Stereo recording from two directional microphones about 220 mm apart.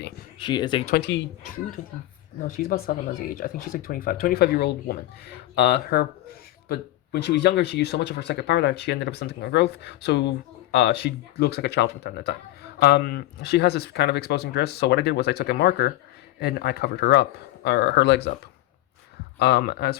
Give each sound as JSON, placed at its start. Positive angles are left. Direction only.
{"t": 0.3, "sound": "speech", "side_deg": 20}
{"t": 0.9, "sound": "speech", "side_deg": 50}
{"t": 2.5, "sound": "speech", "side_deg": 35}
{"t": 19.4, "sound": "speech", "side_deg": 45}